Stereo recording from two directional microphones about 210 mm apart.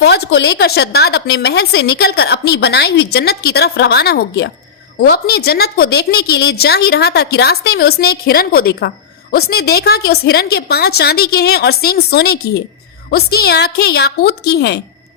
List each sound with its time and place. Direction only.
0.0 s a woman's voice: 50° left (ahead or behind)